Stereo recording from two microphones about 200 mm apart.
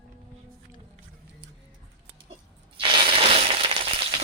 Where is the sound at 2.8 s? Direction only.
25° right (ahead or behind).